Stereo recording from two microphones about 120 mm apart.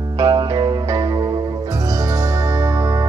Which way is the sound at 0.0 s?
30° right (ahead or behind).